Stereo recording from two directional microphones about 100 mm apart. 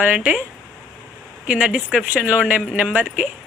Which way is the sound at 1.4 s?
10° right (ahead or behind).